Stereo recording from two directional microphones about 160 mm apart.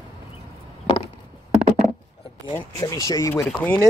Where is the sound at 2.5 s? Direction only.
20° left (ahead or behind).